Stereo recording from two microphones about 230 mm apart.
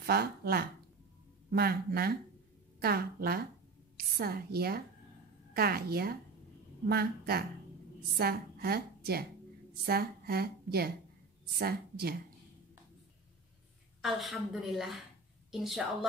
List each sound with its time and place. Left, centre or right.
0.0 s a woman's voice: right
14.0 s a woman's voice: centre